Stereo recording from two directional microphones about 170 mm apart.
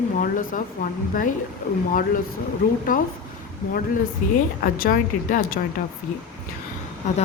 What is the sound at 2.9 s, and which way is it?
Speech, 55° left (ahead or behind).